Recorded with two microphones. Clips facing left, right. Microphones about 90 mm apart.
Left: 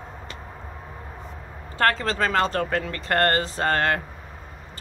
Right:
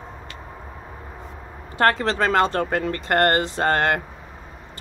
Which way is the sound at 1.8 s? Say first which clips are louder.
Right 3 dB; 25° right (ahead or behind).